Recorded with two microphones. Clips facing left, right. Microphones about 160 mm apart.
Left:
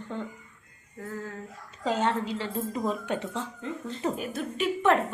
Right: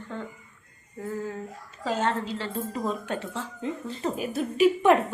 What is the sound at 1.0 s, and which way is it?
Speech, 15° right (ahead or behind).